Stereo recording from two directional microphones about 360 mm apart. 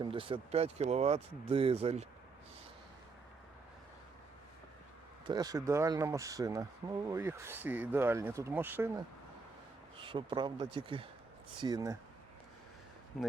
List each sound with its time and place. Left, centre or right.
0.0 s speech: centre
5.2 s speech: centre
10.0 s speech: centre
13.2 s speech: centre